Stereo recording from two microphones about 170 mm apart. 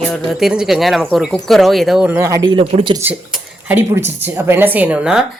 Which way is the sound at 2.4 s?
30° right (ahead or behind).